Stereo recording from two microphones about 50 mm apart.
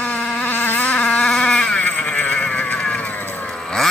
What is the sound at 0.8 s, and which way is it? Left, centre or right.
Vehicle, left.